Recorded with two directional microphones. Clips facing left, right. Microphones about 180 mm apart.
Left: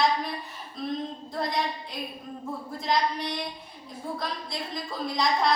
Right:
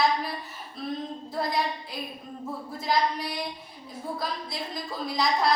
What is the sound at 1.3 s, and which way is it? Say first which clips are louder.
Speech: right 1 dB; 5° right (ahead or behind).